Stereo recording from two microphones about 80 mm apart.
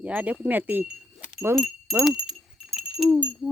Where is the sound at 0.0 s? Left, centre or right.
Centre.